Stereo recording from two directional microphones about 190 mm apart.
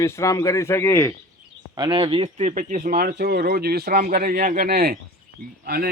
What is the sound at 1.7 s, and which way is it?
Speech, 25° right (ahead or behind).